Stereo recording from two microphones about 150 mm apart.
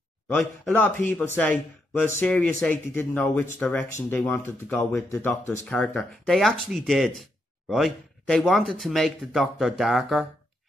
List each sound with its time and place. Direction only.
0.4 s speech: 10° left (ahead or behind)
5.7 s speech: 5° left (ahead or behind)